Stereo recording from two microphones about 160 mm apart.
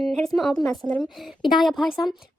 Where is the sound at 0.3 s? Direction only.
Centre (ahead or behind).